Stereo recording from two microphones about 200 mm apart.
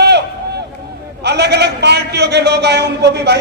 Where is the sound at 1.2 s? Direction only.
55° right (ahead or behind).